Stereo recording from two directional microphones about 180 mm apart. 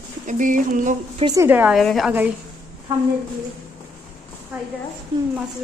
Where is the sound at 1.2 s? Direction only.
15° right (ahead or behind).